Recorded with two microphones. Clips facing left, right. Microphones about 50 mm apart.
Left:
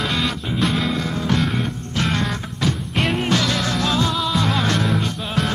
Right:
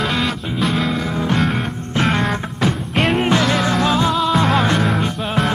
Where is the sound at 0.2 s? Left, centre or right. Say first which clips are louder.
Right 2 dB; centre.